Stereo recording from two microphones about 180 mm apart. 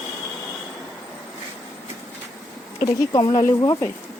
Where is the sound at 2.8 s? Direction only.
25° left (ahead or behind).